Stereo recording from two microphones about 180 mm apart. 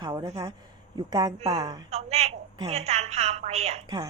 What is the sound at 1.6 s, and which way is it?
Speech, 20° right (ahead or behind).